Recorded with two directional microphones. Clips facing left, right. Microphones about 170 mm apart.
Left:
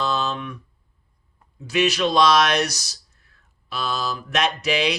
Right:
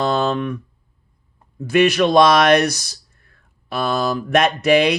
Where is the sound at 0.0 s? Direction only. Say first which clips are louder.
Right 6 dB; 55° right (ahead or behind).